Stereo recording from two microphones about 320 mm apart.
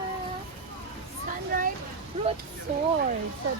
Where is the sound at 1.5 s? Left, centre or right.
Right.